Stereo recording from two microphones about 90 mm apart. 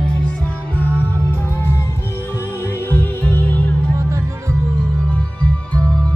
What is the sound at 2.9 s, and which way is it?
Music, 20° left (ahead or behind).